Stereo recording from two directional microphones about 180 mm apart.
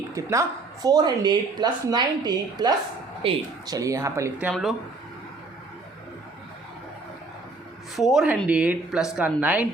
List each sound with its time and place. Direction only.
0.1 s speech: 15° right (ahead or behind)
4.4 s a woman's voice: centre (ahead or behind)
7.9 s a woman's voice: centre (ahead or behind)